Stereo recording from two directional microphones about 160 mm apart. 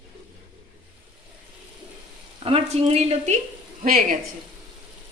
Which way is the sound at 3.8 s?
55° right (ahead or behind).